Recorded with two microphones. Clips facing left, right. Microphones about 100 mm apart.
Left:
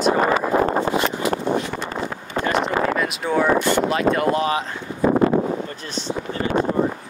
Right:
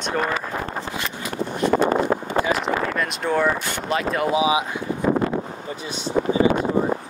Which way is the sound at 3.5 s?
70° left (ahead or behind).